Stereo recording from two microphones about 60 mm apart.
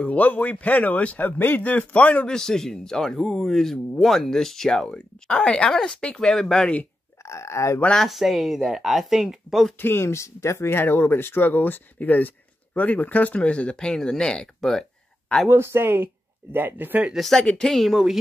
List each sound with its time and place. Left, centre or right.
0.0 s a man's voice: left
2.3 s speech: centre
4.8 s speech: centre
7.2 s speech: left
7.9 s speech: centre
9.8 s speech: left
10.8 s speech: left; by 14.9 s centre
15.5 s speech: right
17.1 s speech: centre